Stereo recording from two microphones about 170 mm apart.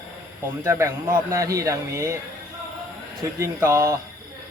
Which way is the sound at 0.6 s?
15° right (ahead or behind).